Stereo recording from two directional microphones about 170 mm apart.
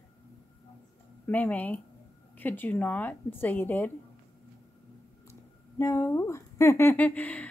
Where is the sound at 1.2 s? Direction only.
10° left (ahead or behind).